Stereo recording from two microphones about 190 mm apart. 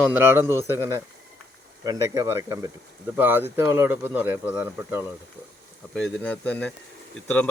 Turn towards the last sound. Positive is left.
turn(degrees=5)  # may be behind; listen again after turning